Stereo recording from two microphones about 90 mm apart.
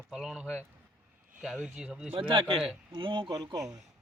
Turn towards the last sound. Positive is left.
turn(degrees=-45)  # may be behind; listen again after turning